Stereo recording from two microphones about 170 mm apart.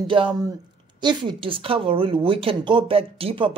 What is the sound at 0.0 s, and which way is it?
A woman's voice, 30° right (ahead or behind).